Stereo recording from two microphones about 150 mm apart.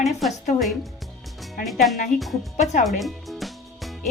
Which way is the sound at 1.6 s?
Centre (ahead or behind).